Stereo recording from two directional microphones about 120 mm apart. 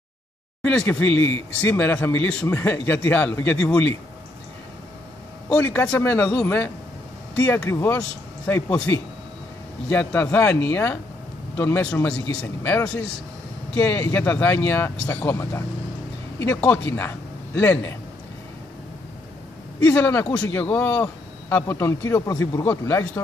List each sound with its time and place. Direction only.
0.6 s speech: 10° left (ahead or behind)
5.5 s speech: 15° left (ahead or behind)
8.6 s speech: 10° left (ahead or behind)
19.8 s speech: 10° left (ahead or behind)